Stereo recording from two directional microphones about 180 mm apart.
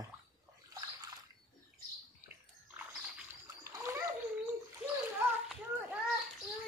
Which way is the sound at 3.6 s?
15° right (ahead or behind).